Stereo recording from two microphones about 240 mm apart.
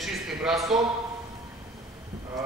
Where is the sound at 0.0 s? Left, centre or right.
Centre.